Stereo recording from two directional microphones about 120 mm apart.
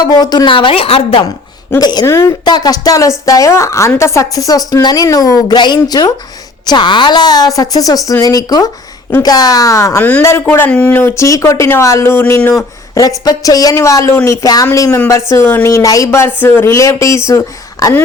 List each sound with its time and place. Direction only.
0.0 s a woman's voice: 35° left (ahead or behind); by 1.2 s 50° left (ahead or behind)
1.8 s a woman's voice: 35° left (ahead or behind)
2.1 s a woman's voice: 25° left (ahead or behind)
10.0 s speech: 15° left (ahead or behind)
12.9 s speech: 30° left (ahead or behind)